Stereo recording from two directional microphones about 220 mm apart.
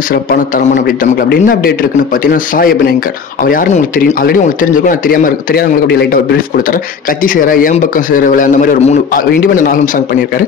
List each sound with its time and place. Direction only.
0.1 s speech: 40° left (ahead or behind)